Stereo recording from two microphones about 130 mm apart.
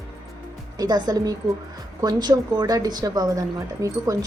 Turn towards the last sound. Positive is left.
turn(degrees=-25)  # may be behind; listen again after turning